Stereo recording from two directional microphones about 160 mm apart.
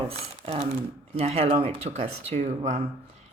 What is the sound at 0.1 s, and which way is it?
Speech, 40° right (ahead or behind).